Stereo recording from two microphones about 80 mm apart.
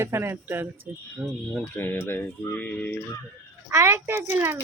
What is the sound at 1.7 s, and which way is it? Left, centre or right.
Speech, left.